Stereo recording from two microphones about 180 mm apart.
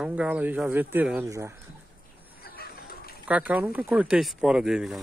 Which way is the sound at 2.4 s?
55° left (ahead or behind).